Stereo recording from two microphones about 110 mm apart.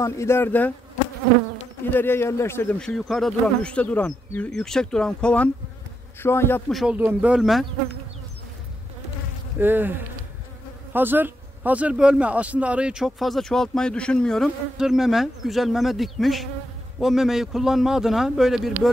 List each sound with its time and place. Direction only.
0.0 s speech: 25° left (ahead or behind)
1.9 s speech: 20° left (ahead or behind)
2.8 s speech: 5° left (ahead or behind)
6.2 s speech: 20° left (ahead or behind)
6.9 s speech: 15° right (ahead or behind)
9.6 s bee: 20° right (ahead or behind)
10.9 s speech: 20° right (ahead or behind); by 14.5 s 5° left (ahead or behind)
14.8 s insect: 5° right (ahead or behind)